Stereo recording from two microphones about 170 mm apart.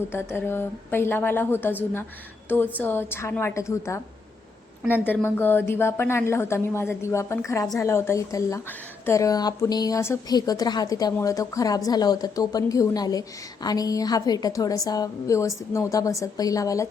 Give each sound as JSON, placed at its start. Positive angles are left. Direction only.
{"t": 0.1, "sound": "speech", "side_deg": 15}
{"t": 2.7, "sound": "speech", "side_deg": 10}
{"t": 5.0, "sound": "speech", "side_deg": 10}